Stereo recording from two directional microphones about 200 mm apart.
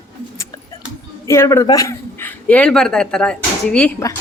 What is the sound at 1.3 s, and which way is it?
A man's voice, 15° left (ahead or behind).